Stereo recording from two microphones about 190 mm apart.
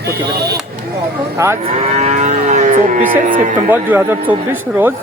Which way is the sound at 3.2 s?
45° right (ahead or behind).